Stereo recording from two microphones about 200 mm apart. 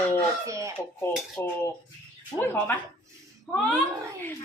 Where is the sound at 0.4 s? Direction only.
15° right (ahead or behind).